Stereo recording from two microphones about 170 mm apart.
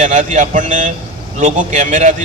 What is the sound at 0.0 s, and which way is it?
A man's voice, 40° right (ahead or behind).